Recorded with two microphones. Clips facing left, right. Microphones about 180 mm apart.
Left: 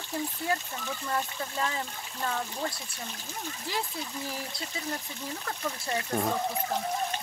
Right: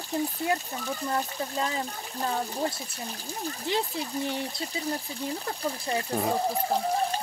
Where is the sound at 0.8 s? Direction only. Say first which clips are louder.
Right 2 dB; 25° right (ahead or behind).